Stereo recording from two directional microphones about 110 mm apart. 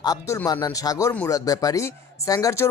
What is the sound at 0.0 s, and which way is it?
Speech, 35° left (ahead or behind).